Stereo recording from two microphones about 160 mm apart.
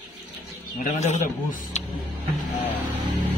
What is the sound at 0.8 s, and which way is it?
Speech, 50° left (ahead or behind).